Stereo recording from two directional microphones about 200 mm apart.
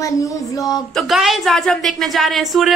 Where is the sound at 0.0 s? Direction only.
15° left (ahead or behind).